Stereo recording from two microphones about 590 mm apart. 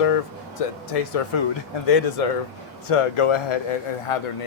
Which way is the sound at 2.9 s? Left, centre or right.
Left.